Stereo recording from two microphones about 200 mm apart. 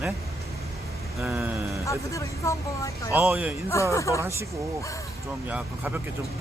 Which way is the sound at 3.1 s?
10° right (ahead or behind).